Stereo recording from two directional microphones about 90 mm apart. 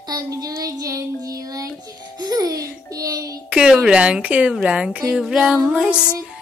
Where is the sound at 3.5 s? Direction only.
10° right (ahead or behind).